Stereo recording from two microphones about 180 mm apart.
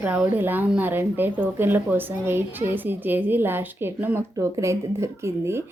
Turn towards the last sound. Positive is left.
turn(degrees=-15)  # may be behind; listen again after turning